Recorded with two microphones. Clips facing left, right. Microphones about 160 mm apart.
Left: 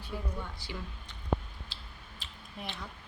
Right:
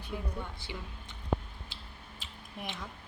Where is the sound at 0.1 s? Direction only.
10° right (ahead or behind).